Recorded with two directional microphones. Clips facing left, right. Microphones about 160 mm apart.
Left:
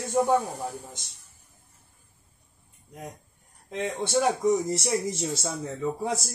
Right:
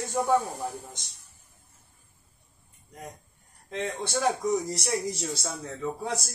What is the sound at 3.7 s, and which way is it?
Speech, 15° left (ahead or behind).